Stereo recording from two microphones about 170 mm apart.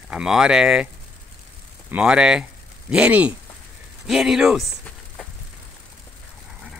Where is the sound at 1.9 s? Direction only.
5° right (ahead or behind).